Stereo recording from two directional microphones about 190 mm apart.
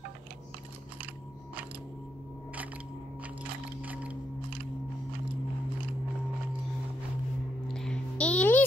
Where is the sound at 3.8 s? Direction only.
5° right (ahead or behind).